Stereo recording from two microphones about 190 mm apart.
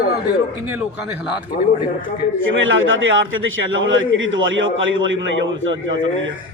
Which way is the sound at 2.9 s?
90° right.